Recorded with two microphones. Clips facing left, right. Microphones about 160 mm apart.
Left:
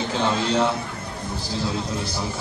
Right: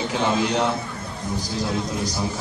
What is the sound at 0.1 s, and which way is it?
Speech, 15° right (ahead or behind).